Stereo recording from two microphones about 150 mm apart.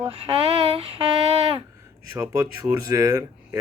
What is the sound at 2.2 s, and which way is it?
Speech, 20° right (ahead or behind).